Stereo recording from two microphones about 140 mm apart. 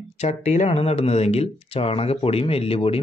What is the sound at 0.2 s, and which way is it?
Speech, 55° left (ahead or behind).